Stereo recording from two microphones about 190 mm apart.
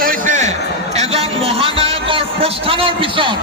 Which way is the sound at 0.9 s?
35° right (ahead or behind).